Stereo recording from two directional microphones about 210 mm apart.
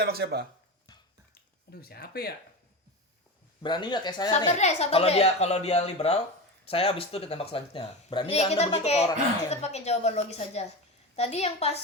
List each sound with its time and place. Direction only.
0.0 s speech: 50° right (ahead or behind)
1.7 s speech: 45° left (ahead or behind)
3.6 s speech: 20° left (ahead or behind)
4.3 s a woman's voice: 30° left (ahead or behind)